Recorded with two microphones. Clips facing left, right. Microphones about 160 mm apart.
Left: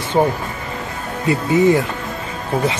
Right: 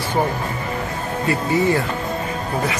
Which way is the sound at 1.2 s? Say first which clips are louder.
Left 5 dB; 20° left (ahead or behind).